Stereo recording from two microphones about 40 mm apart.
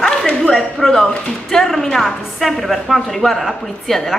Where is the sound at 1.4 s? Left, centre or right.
Centre.